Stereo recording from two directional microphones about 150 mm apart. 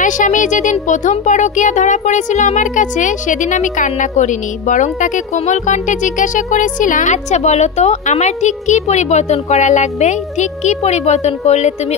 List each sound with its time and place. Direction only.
0.0 s speech: 60° left (ahead or behind)